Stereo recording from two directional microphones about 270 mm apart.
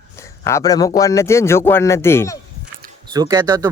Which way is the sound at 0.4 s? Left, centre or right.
Centre.